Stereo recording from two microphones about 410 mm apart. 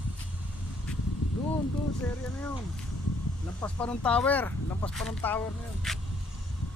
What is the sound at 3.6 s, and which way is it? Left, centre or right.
Speech, centre.